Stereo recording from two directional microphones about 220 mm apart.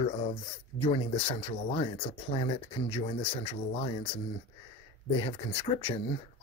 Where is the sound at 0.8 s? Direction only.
25° left (ahead or behind).